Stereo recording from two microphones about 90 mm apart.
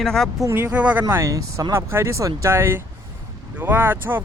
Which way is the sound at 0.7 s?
15° right (ahead or behind).